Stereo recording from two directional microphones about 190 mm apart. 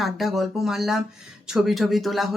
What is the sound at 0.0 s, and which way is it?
Speech, centre (ahead or behind).